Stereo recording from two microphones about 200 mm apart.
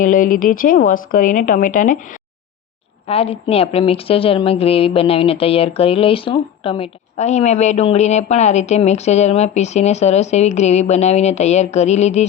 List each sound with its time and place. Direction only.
0.0 s speech: 40° left (ahead or behind)
3.1 s a woman's voice: 30° left (ahead or behind)